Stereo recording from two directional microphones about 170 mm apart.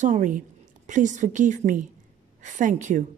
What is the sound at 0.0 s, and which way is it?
A woman's voice, 45° right (ahead or behind).